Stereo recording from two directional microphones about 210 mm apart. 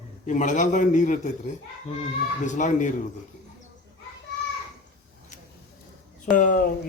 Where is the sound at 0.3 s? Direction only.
35° left (ahead or behind).